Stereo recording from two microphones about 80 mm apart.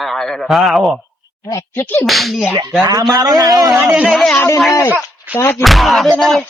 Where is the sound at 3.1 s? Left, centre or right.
Right.